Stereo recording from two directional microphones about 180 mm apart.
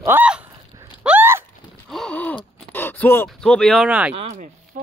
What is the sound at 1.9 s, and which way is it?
Gasp, 5° left (ahead or behind).